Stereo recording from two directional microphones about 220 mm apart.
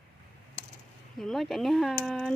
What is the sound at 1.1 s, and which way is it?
Speech, centre (ahead or behind).